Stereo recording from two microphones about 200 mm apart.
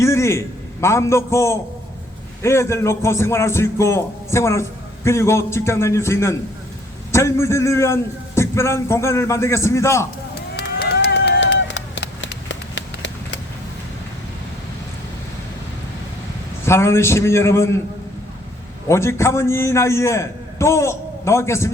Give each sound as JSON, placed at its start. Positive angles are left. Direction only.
{"t": 0.0, "sound": "a man's voice", "side_deg": 15}
{"t": 10.6, "sound": "run", "side_deg": 60}
{"t": 16.6, "sound": "a man's voice", "side_deg": 15}
{"t": 18.9, "sound": "a man's voice", "side_deg": 15}